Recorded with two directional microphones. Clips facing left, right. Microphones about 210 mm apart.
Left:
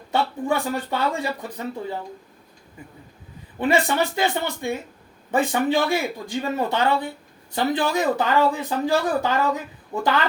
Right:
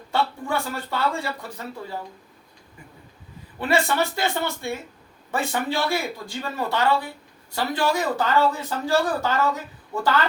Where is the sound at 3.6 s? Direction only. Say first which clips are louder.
Left 2 dB; 15° left (ahead or behind).